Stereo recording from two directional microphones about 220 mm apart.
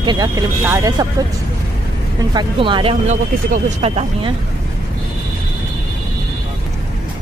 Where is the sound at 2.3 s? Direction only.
20° right (ahead or behind).